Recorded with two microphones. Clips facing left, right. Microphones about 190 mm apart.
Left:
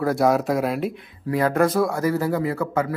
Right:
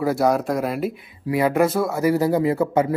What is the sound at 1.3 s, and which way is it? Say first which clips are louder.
Speech: right 1 dB; 10° right (ahead or behind).